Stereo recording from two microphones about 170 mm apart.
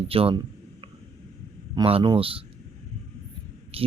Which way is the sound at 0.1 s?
35° right (ahead or behind).